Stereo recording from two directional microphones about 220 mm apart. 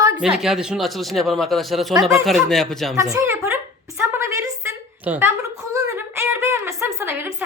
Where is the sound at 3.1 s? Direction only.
15° right (ahead or behind).